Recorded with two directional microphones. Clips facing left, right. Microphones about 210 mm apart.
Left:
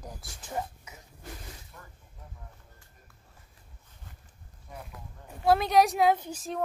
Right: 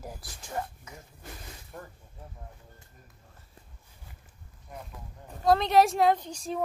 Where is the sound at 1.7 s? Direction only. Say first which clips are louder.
Right 8 dB; 50° right (ahead or behind).